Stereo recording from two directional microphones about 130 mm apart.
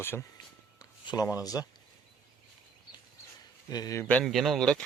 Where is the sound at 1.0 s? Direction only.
30° left (ahead or behind).